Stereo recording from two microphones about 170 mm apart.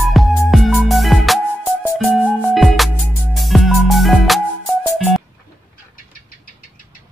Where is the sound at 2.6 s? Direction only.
Centre (ahead or behind).